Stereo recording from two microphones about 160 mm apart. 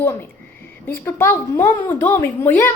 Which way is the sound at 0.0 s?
15° left (ahead or behind).